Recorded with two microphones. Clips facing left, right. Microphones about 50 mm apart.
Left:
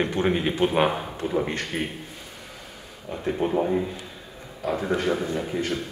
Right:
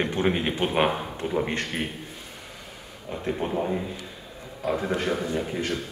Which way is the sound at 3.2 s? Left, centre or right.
Centre.